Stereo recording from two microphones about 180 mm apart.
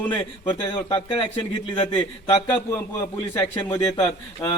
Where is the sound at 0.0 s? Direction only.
10° left (ahead or behind).